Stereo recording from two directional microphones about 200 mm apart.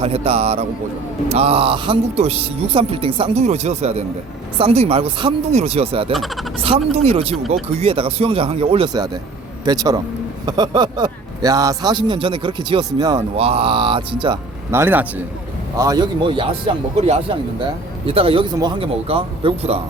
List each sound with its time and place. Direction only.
0.0 s a man's voice: 30° right (ahead or behind)
6.1 s speech: centre (ahead or behind)
6.6 s speech: 30° right (ahead or behind)
14.7 s speech: 10° right (ahead or behind); by 19.8 s 30° right (ahead or behind)